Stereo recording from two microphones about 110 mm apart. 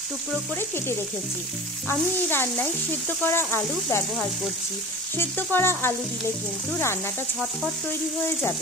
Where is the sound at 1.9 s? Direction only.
20° left (ahead or behind).